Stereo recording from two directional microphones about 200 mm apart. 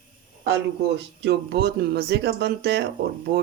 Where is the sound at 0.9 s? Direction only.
55° right (ahead or behind).